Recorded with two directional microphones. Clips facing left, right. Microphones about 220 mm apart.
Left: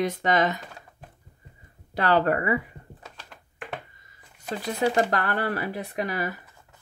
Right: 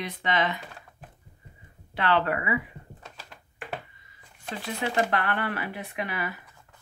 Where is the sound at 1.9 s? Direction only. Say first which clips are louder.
Left 3 dB; 40° left (ahead or behind).